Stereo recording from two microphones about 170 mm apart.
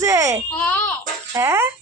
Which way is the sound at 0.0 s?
15° right (ahead or behind).